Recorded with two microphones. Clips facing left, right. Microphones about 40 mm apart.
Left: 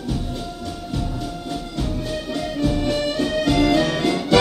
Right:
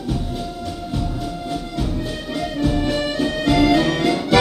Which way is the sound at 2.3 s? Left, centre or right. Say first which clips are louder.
Right 2 dB; centre.